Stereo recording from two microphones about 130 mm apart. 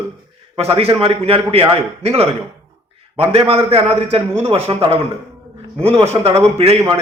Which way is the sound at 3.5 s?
45° right (ahead or behind).